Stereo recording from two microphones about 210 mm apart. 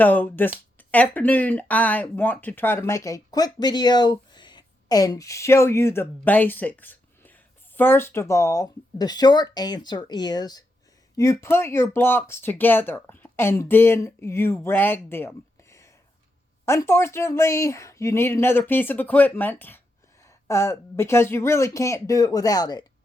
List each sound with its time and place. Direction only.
0.0 s speech: 10° left (ahead or behind)
16.6 s speech: 10° left (ahead or behind)